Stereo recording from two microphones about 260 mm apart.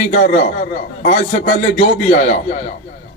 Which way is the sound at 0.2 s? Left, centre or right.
Left.